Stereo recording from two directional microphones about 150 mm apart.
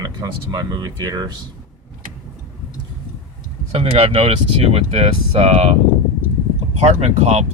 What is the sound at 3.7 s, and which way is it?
Speech, 40° right (ahead or behind).